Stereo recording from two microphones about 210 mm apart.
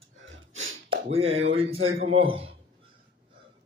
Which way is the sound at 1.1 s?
30° right (ahead or behind).